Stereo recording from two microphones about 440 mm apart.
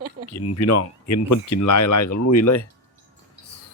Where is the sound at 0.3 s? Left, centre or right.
Left.